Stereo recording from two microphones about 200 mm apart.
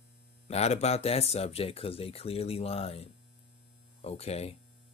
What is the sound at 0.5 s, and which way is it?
Speech, 35° left (ahead or behind).